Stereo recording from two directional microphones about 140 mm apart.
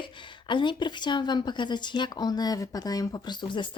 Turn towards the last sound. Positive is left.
turn(degrees=35)  # may be behind; listen again after turning